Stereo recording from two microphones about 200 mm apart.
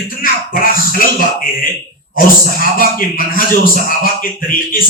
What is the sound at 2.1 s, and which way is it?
A man's voice, 45° left (ahead or behind).